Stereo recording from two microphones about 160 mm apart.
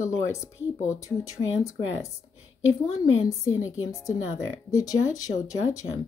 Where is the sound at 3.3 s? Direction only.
20° left (ahead or behind).